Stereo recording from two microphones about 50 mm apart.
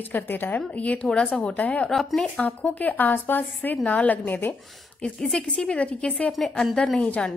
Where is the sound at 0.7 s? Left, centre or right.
Left.